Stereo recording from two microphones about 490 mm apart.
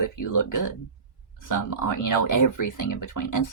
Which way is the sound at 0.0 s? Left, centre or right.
Left.